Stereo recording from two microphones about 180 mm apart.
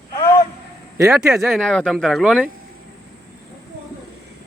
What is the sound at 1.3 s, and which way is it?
Speech, centre (ahead or behind).